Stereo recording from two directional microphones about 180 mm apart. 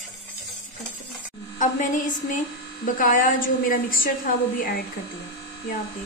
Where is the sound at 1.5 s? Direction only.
45° left (ahead or behind).